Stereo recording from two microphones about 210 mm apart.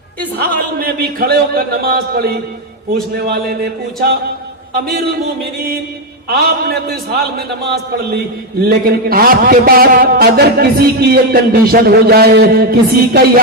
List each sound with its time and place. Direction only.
0.3 s a man's voice: 45° right (ahead or behind)
8.6 s a man's voice: 45° right (ahead or behind)